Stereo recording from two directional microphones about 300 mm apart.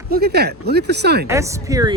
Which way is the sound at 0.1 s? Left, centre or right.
Right.